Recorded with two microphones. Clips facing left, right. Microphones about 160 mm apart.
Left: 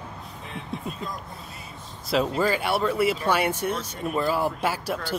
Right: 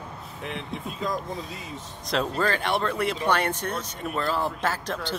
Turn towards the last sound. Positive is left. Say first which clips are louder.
# left 2 dB
turn(degrees=10)  # may be behind; listen again after turning